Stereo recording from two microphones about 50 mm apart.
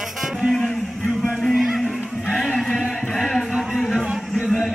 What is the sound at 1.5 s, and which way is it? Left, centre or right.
Music, centre.